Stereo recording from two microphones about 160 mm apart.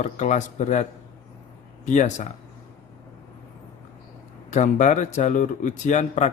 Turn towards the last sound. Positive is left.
turn(degrees=50)  # may be behind; listen again after turning